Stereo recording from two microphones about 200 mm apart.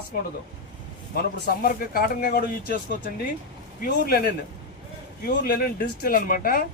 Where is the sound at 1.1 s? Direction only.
50° left (ahead or behind).